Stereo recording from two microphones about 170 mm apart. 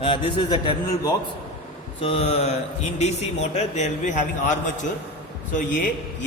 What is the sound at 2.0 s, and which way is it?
A man's voice, 35° left (ahead or behind).